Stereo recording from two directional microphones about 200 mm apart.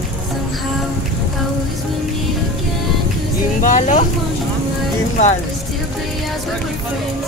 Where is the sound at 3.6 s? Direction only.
40° left (ahead or behind).